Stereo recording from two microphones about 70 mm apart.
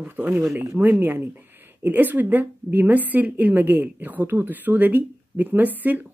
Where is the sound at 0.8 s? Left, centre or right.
Right.